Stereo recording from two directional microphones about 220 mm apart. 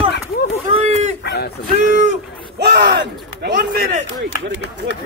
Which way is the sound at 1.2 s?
50° left (ahead or behind).